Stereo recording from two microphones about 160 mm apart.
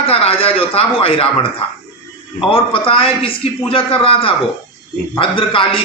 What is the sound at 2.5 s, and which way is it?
A man's voice, 35° left (ahead or behind).